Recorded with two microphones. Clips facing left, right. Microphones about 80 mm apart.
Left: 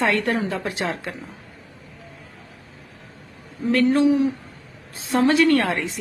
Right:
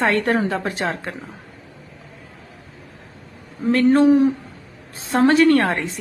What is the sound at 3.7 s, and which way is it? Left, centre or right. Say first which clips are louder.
A woman's voice: right 3 dB; right.